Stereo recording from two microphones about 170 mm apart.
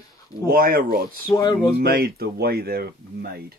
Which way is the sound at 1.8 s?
65° right (ahead or behind).